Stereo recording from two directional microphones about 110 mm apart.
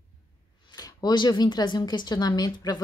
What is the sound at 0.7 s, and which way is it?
A woman's voice, 35° left (ahead or behind).